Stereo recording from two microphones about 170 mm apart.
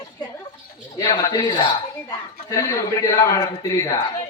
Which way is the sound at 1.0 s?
20° left (ahead or behind).